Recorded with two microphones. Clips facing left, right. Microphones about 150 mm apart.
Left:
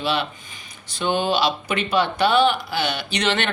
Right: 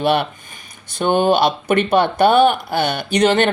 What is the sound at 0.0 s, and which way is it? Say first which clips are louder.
Speech: right 7 dB; 55° right (ahead or behind).